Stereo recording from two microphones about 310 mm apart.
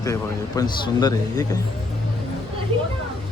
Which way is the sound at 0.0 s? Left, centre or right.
Centre.